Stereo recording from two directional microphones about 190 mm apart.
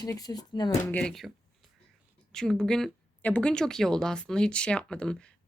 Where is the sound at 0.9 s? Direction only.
5° left (ahead or behind).